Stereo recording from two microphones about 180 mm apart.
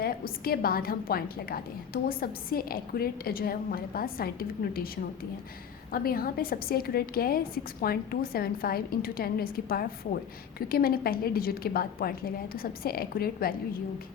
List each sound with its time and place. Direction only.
0.0 s a woman's voice: 55° left (ahead or behind)
5.9 s a woman's voice: 55° left (ahead or behind)